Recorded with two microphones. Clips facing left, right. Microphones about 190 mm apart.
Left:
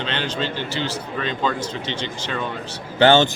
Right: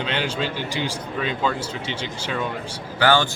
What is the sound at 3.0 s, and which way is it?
Speech, 25° left (ahead or behind).